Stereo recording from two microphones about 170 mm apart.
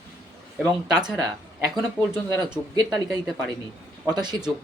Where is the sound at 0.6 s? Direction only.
5° right (ahead or behind).